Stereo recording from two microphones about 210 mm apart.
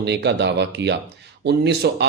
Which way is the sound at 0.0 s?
55° right (ahead or behind).